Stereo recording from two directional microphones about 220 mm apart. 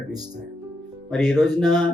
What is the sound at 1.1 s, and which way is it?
Speech, centre (ahead or behind).